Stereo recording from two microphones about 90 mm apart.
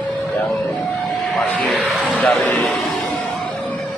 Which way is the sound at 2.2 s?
20° left (ahead or behind).